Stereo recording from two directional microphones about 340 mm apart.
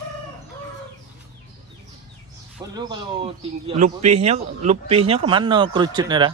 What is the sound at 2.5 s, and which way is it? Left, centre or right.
Speech, centre.